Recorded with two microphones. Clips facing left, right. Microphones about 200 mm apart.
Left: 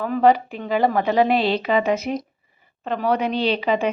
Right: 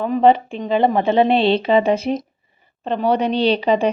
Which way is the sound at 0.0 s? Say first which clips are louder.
Right 3 dB; 25° right (ahead or behind).